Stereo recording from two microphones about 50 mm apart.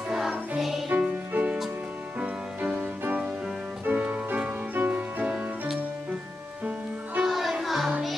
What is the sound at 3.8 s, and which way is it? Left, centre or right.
Music, right.